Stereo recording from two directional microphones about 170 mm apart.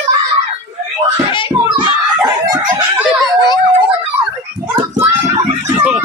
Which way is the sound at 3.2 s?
25° left (ahead or behind).